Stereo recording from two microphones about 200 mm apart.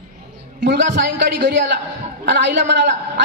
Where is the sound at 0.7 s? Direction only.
60° right (ahead or behind).